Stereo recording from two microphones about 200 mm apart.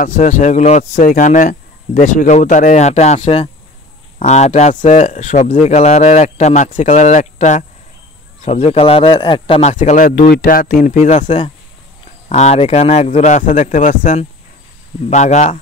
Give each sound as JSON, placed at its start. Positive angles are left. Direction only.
{"t": 0.0, "sound": "a man's voice", "side_deg": 40}
{"t": 10.1, "sound": "speech", "side_deg": 50}